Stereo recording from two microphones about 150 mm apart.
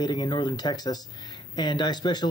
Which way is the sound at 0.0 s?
30° left (ahead or behind).